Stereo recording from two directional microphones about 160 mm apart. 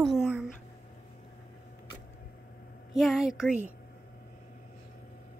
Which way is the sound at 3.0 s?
Centre (ahead or behind).